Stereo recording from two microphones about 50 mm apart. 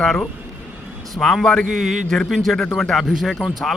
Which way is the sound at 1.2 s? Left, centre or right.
Left.